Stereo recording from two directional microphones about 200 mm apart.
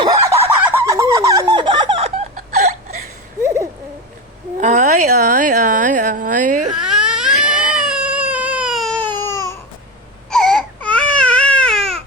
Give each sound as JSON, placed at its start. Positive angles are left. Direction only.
{"t": 0.3, "sound": "fowl", "side_deg": -10}
{"t": 1.5, "sound": "laughter", "side_deg": -25}
{"t": 3.4, "sound": "hoot", "side_deg": -15}
{"t": 4.6, "sound": "a sound", "side_deg": -35}
{"t": 6.8, "sound": "baby cry", "side_deg": -5}
{"t": 10.2, "sound": "baby cry", "side_deg": 5}